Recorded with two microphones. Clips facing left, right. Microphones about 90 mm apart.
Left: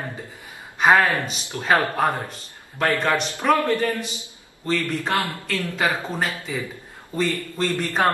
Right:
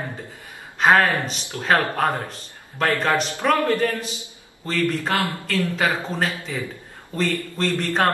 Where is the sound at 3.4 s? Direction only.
Centre (ahead or behind).